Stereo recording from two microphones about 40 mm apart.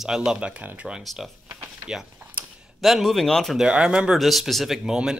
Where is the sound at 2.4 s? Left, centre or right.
Right.